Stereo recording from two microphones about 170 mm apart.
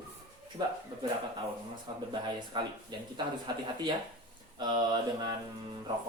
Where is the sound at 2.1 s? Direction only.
25° right (ahead or behind).